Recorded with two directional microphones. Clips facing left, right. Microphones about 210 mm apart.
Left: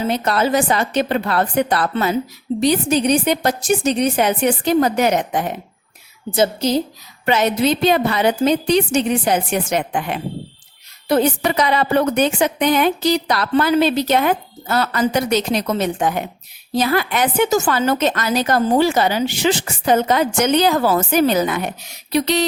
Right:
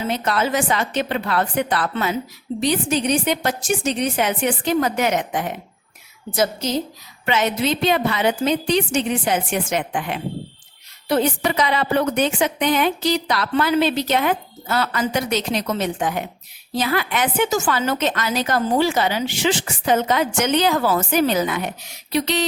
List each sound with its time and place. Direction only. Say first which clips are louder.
0.1 s a woman's voice: left 3 dB; 35° left (ahead or behind)